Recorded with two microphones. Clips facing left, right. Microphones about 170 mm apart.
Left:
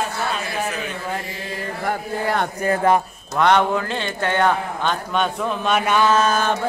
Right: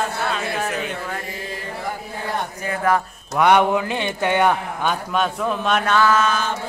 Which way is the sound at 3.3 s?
10° right (ahead or behind).